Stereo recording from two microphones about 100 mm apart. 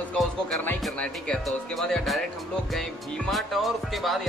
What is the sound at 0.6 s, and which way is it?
Speech, 20° left (ahead or behind).